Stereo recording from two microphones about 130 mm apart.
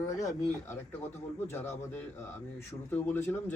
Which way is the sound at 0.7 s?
15° left (ahead or behind).